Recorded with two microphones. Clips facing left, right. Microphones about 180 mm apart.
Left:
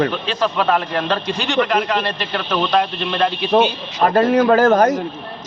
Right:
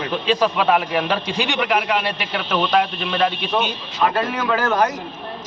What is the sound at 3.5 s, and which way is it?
A man's voice, 40° left (ahead or behind).